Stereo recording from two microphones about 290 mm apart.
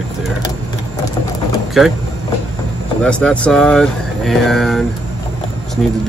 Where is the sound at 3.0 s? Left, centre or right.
Centre.